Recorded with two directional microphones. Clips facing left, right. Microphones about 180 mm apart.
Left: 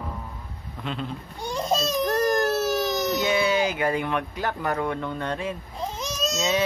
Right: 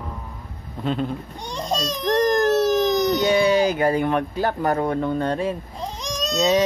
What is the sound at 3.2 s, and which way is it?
Speech, 35° right (ahead or behind).